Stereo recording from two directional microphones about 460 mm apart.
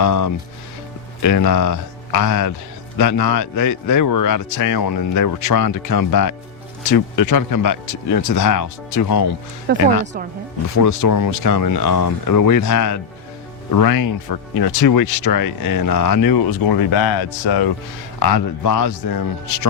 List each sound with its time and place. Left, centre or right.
0.0 s a man's voice: left
9.7 s speech: right
10.8 s a man's voice: left